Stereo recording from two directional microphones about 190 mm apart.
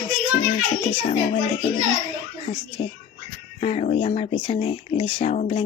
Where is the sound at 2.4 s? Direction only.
30° left (ahead or behind).